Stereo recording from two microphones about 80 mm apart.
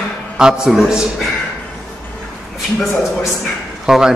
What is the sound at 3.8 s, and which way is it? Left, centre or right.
Speech, centre.